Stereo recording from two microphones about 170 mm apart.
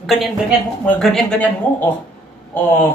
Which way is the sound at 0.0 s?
Centre (ahead or behind).